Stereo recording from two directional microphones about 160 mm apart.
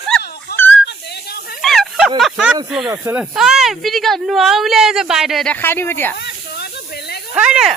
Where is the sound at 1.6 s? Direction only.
Centre (ahead or behind).